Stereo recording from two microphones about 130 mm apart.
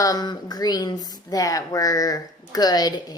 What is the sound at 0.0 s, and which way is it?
A woman's voice, 30° left (ahead or behind).